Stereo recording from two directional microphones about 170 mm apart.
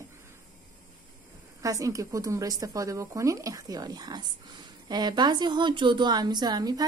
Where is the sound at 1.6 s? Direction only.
20° right (ahead or behind).